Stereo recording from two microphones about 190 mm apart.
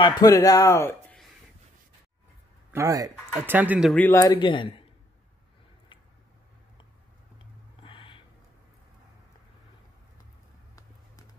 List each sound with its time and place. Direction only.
0.0 s speech: 20° left (ahead or behind)
2.7 s speech: 15° right (ahead or behind)
3.9 s speech: 10° left (ahead or behind)
4.2 s speech: 20° left (ahead or behind)
7.8 s a sound: 25° left (ahead or behind)